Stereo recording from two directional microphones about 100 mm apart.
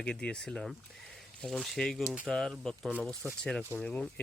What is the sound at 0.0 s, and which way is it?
Speech, 10° left (ahead or behind).